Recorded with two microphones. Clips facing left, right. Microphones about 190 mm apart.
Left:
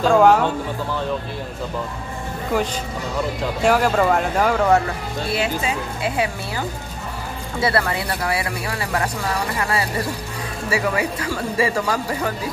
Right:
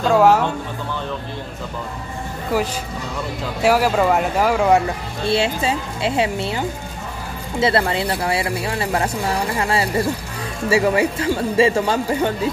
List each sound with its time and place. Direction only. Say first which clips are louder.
0.0 s speech: even; 5° right (ahead or behind)
2.5 s speech: right 1 dB; 5° right (ahead or behind)
5.3 s speech: right 4 dB; 30° right (ahead or behind)
7.6 s speech: right 3 dB; 25° right (ahead or behind)